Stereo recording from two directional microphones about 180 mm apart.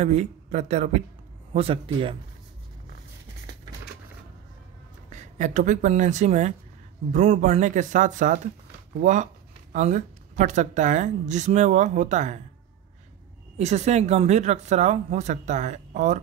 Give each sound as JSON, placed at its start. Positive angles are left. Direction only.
{"t": 0.0, "sound": "speech", "side_deg": -40}
{"t": 5.1, "sound": "speech", "side_deg": -40}
{"t": 13.6, "sound": "speech", "side_deg": -40}